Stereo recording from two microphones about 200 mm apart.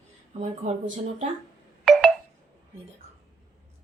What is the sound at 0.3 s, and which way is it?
Speech, 35° right (ahead or behind).